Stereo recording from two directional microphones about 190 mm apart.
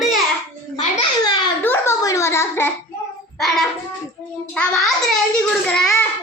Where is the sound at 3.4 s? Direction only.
Centre (ahead or behind).